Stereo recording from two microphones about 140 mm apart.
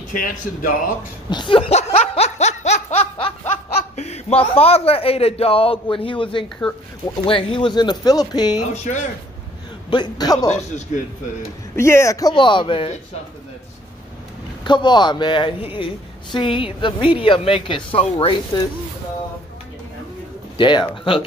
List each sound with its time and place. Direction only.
0.1 s speech: 75° left (ahead or behind)
1.3 s laughter: 35° left (ahead or behind)
7.2 s a woman's voice: 40° left (ahead or behind)
9.8 s speech: 30° left (ahead or behind)
11.7 s speech: 20° left (ahead or behind); by 12.9 s 40° left (ahead or behind)
14.6 s a woman's voice: 35° left (ahead or behind)
20.5 s a woman's voice: 35° left (ahead or behind)